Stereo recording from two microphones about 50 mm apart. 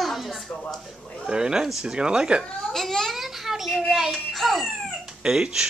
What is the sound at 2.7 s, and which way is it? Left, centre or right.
Speech, centre.